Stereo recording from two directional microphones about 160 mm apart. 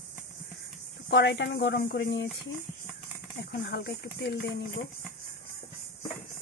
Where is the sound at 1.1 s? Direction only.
90° left.